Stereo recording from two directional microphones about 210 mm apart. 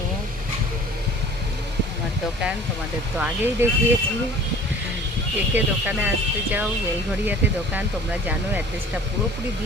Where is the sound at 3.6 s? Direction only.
10° right (ahead or behind).